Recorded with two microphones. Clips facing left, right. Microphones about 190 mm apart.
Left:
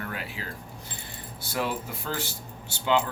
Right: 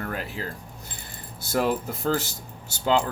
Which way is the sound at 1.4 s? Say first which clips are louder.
Right 6 dB; 45° right (ahead or behind).